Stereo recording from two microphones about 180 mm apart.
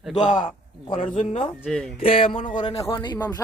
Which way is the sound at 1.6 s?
5° left (ahead or behind).